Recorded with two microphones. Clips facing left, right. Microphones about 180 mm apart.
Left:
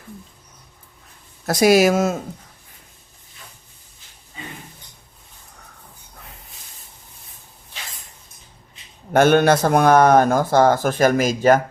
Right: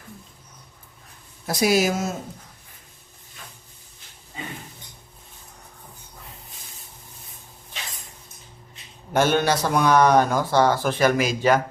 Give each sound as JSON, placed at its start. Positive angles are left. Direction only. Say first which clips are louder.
{"t": 1.5, "sound": "speech", "louder": "left 6 dB", "side_deg": 75}
{"t": 9.1, "sound": "a man's voice", "louder": "left 6 dB", "side_deg": 55}